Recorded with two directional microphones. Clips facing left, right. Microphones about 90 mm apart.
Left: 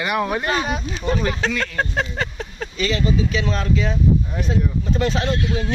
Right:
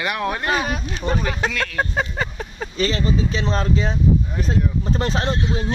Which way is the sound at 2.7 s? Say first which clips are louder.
Even; 35° right (ahead or behind).